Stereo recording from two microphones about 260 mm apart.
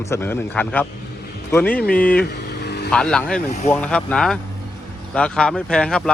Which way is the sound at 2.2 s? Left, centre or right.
Left.